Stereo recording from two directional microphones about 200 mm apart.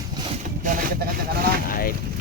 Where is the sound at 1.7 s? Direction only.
45° left (ahead or behind).